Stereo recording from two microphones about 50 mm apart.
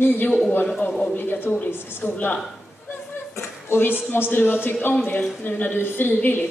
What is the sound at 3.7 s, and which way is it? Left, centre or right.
Speech, left.